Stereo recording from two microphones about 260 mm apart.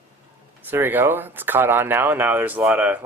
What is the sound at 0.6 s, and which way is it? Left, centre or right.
Speech, centre.